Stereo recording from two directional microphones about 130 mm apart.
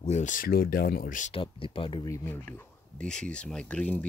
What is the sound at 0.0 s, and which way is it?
Speech, 65° left (ahead or behind).